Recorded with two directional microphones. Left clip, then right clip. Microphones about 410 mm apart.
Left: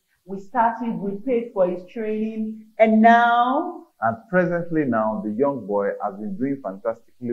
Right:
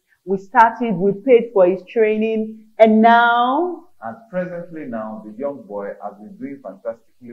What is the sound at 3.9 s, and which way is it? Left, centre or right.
A man's voice, left.